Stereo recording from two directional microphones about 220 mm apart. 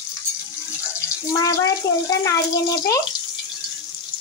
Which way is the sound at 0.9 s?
15° left (ahead or behind).